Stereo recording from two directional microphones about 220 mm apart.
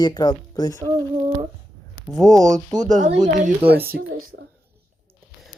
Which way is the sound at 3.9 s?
50° right (ahead or behind).